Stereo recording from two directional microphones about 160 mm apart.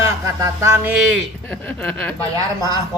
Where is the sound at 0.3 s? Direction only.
20° right (ahead or behind).